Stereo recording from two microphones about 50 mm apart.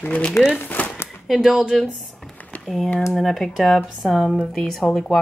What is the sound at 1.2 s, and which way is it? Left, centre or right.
Speech, centre.